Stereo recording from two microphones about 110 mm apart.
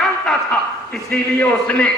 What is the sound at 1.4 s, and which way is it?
Speech, 10° left (ahead or behind).